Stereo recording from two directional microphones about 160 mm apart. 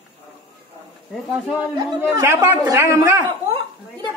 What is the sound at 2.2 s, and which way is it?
A woman's voice, 15° right (ahead or behind).